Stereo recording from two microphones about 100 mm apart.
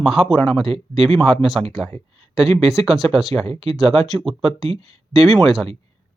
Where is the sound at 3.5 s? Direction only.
75° right (ahead or behind).